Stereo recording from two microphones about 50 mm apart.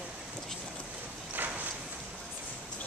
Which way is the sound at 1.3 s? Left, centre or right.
Right.